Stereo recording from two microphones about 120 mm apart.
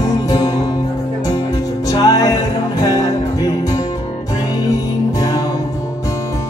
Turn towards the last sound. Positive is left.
turn(degrees=30)  # may be behind; listen again after turning